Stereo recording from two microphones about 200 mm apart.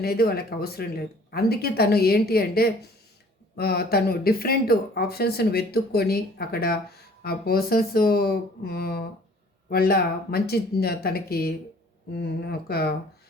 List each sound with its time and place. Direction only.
0.0 s speech: 50° left (ahead or behind)